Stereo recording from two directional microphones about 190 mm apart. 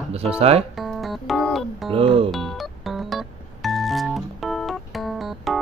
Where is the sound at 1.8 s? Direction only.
30° right (ahead or behind).